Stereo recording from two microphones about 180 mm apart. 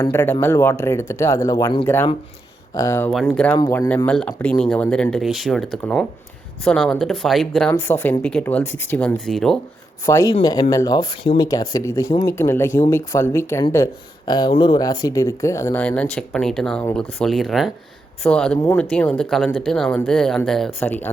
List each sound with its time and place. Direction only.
0.0 s speech: 10° left (ahead or behind)
3.1 s speech: 5° left (ahead or behind)
10.1 s speech: 15° left (ahead or behind)